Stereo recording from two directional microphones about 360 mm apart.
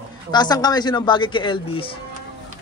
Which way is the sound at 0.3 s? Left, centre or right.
Centre.